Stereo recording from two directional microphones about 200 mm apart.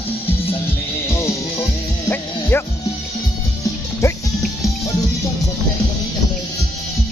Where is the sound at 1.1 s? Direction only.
15° left (ahead or behind).